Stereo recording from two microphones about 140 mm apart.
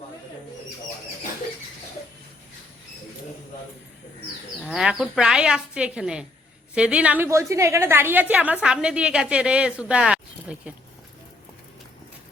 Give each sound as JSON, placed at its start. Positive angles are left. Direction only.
{"t": 4.6, "sound": "a woman's voice", "side_deg": -5}